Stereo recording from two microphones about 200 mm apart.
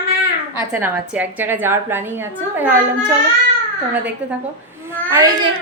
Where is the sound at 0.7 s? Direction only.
10° right (ahead or behind).